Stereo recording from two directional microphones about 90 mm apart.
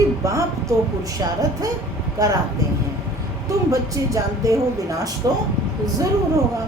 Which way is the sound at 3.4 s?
35° right (ahead or behind).